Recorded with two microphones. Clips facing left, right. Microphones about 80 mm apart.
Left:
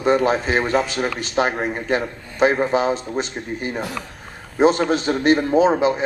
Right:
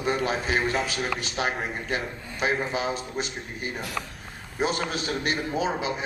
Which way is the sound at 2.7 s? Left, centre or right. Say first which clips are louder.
Left 9 dB; left.